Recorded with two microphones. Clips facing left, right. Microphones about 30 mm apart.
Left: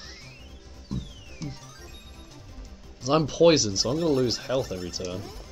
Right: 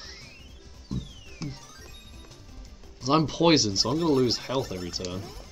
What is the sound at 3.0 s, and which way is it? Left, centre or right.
Speech, centre.